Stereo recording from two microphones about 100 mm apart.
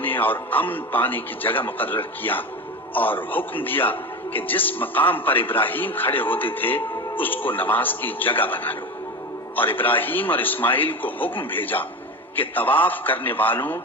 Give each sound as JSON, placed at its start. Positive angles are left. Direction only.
{"t": 0.0, "sound": "a man's voice", "side_deg": 20}